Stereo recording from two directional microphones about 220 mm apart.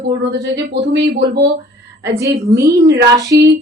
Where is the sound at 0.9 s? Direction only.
50° right (ahead or behind).